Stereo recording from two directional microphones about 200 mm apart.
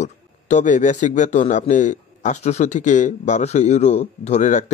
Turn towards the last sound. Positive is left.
turn(degrees=35)  # may be behind; listen again after turning